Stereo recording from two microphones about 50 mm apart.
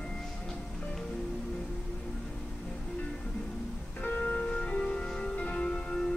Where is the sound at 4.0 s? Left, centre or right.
Left.